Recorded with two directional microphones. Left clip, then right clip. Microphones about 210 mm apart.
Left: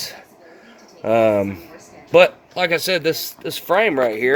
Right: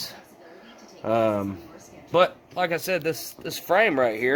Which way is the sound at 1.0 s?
25° left (ahead or behind).